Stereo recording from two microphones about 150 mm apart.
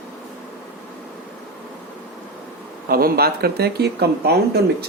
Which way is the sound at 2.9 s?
85° right.